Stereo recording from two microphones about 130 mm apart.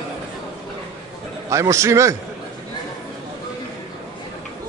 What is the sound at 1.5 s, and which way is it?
Speech, 25° right (ahead or behind).